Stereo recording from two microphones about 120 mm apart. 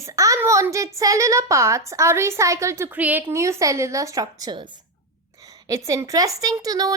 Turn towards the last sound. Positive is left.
turn(degrees=-30)  # may be behind; listen again after turning